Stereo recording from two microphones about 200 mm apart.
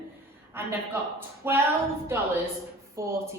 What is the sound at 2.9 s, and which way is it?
Speech, 15° right (ahead or behind).